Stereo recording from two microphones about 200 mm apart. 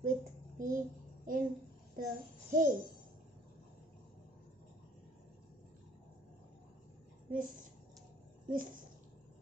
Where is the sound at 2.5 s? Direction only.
40° right (ahead or behind).